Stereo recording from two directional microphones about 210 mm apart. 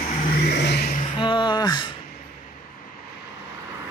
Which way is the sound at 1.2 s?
20° left (ahead or behind).